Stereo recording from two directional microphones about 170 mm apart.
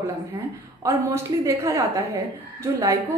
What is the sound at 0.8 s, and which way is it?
Speech, 15° right (ahead or behind).